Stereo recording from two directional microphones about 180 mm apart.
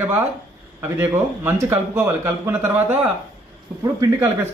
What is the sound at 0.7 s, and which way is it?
A man's voice, 15° right (ahead or behind).